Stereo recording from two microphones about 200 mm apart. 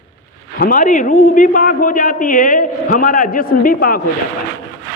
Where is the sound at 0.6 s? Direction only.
40° left (ahead or behind).